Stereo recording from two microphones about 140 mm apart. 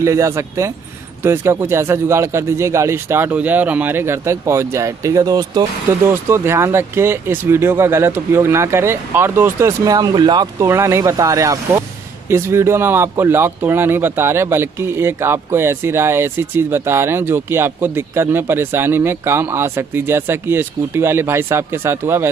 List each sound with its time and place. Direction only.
0.0 s speech: 20° right (ahead or behind)